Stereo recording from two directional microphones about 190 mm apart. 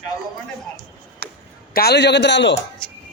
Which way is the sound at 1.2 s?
55° right (ahead or behind).